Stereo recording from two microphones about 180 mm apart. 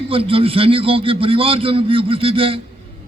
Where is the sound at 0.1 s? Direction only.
30° right (ahead or behind).